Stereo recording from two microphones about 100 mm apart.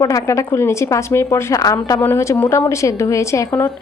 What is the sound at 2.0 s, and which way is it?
A woman's voice, 25° left (ahead or behind).